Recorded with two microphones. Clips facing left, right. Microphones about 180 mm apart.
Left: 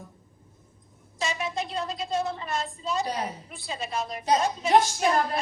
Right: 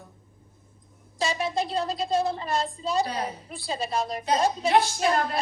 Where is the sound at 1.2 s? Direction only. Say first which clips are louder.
Right 3 dB; 35° right (ahead or behind).